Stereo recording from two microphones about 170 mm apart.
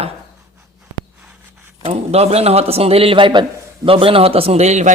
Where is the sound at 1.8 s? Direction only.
40° right (ahead or behind).